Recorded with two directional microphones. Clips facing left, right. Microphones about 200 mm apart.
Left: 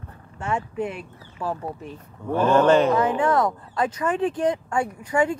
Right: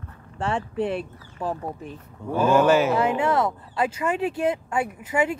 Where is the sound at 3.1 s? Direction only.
25° right (ahead or behind).